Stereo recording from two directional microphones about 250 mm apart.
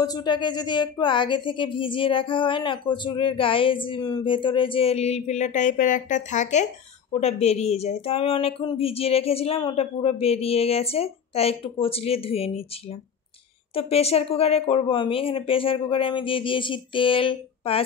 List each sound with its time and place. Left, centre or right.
0.0 s speech: centre
13.7 s speech: left